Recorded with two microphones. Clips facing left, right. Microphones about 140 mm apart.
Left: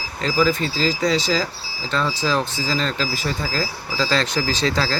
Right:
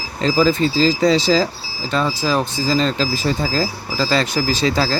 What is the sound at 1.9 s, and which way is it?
Speech, 10° right (ahead or behind).